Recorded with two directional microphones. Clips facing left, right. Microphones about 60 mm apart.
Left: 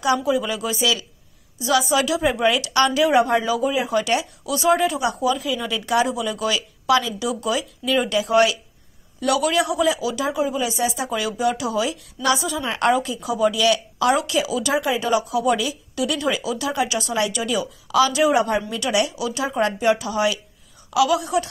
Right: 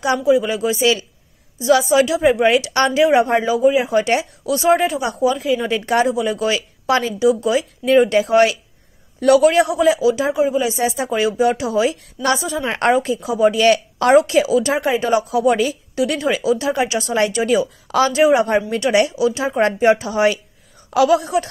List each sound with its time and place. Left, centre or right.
0.0 s a man's voice: right
13.6 s a man's voice: right